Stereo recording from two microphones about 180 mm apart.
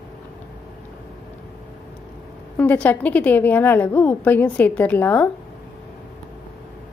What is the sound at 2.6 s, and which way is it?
A woman's voice, 10° left (ahead or behind).